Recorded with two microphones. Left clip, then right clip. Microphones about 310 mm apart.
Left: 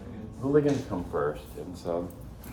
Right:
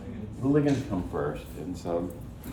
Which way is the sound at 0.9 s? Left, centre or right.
Centre.